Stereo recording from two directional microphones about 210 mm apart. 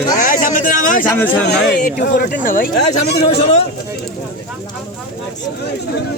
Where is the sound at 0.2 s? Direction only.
40° left (ahead or behind).